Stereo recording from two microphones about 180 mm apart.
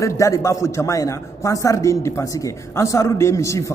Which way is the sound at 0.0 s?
15° left (ahead or behind).